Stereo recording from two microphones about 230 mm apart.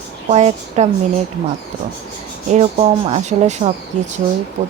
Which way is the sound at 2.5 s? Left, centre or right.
Right.